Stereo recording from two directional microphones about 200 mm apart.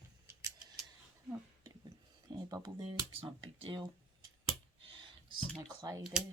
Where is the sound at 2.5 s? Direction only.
20° right (ahead or behind).